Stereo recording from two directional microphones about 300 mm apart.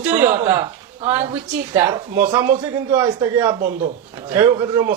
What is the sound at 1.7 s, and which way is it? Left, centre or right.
A man's voice, centre.